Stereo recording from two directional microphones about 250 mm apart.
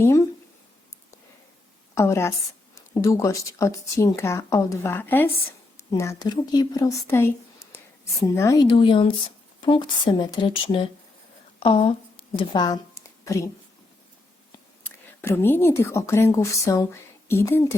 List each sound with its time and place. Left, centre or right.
0.0 s speech: centre
2.0 s speech: centre
14.8 s speech: centre